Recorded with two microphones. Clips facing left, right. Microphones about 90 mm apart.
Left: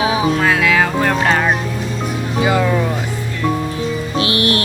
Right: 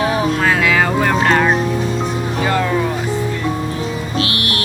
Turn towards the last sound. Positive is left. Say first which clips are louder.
# left 3 dB
turn(degrees=30)  # may be behind; listen again after turning